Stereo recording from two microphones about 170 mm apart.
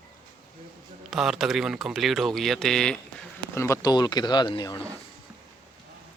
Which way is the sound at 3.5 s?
15° left (ahead or behind).